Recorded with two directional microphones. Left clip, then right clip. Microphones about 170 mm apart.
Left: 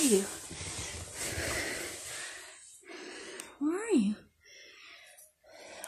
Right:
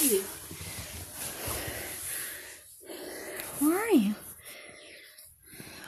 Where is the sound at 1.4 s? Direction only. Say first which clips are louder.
Left 2 dB; 15° left (ahead or behind).